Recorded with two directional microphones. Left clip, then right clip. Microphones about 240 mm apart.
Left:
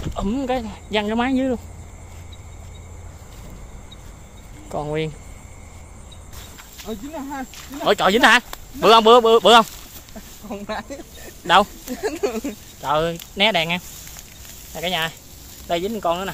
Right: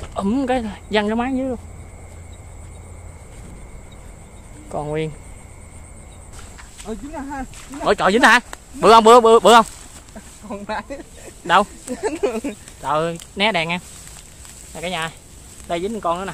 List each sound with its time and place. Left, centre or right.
0.1 s speech: centre
1.1 s speech: centre
4.6 s speech: centre
6.8 s a man's voice: centre
11.4 s speech: centre
11.9 s speech: right
12.8 s speech: centre